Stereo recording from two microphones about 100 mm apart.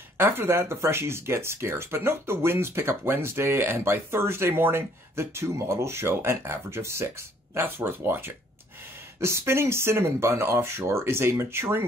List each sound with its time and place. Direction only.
0.2 s speech: 20° right (ahead or behind)